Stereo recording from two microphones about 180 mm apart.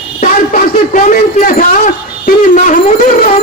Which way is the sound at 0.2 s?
45° left (ahead or behind).